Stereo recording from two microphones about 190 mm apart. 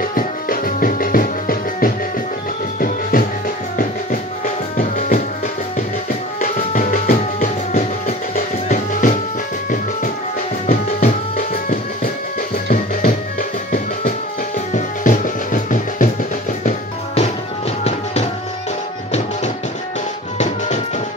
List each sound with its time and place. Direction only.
0.0 s music: 50° left (ahead or behind)
4.7 s music: 45° left (ahead or behind)
10.7 s music: 45° left (ahead or behind)
20.3 s music: 40° left (ahead or behind)